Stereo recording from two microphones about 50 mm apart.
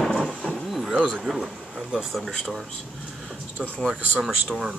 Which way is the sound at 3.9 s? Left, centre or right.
Centre.